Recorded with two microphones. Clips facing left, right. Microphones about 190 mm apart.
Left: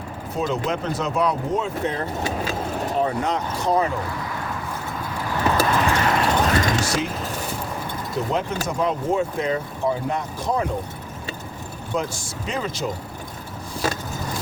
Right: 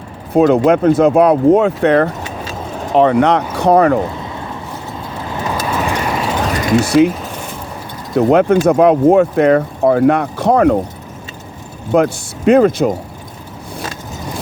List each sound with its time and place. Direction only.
0.3 s speech: 60° right (ahead or behind)
2.9 s speech: 85° right; by 4.0 s 65° right (ahead or behind)
4.1 s a sound: 25° right (ahead or behind)
5.1 s vehicle: 20° right (ahead or behind)
5.6 s vehicle: 10° right (ahead or behind)
6.7 s speech: 60° right (ahead or behind)
8.1 s speech: 65° right (ahead or behind)
11.9 s speech: 60° right (ahead or behind)